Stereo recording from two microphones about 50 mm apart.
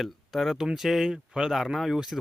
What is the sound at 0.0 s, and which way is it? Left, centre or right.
Speech, centre.